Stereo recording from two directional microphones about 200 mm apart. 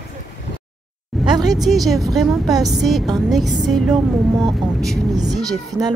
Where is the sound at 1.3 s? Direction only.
20° right (ahead or behind).